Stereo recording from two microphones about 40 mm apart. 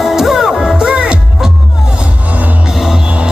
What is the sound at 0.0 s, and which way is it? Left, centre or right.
Music, centre.